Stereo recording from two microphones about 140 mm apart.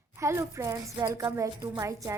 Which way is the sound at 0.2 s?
20° right (ahead or behind).